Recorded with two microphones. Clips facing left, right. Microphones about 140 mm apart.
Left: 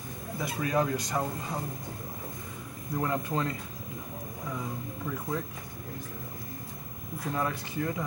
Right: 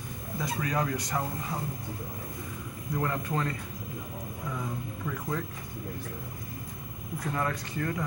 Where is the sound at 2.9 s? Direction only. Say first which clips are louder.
Left 1 dB; 15° left (ahead or behind).